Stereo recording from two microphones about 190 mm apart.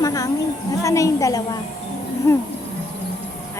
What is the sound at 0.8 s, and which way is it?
Speech, 15° left (ahead or behind).